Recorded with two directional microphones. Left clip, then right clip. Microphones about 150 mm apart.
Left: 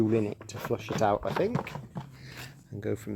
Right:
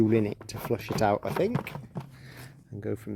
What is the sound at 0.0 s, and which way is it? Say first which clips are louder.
Speech: right 2 dB; 45° right (ahead or behind).